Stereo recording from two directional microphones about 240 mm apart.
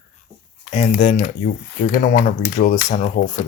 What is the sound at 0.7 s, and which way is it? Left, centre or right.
Speech, left.